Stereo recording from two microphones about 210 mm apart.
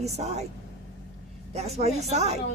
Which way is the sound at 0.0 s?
30° right (ahead or behind).